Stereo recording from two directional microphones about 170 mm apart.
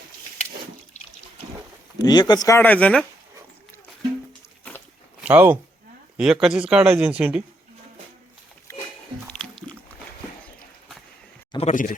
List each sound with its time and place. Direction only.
2.0 s speech: 25° left (ahead or behind); by 3.1 s 5° left (ahead or behind)
5.2 s speech: 10° right (ahead or behind)
9.2 s music: 5° left (ahead or behind)
11.5 s speech: 45° left (ahead or behind)